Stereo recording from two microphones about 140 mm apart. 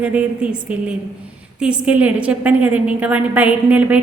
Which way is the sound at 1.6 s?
10° right (ahead or behind).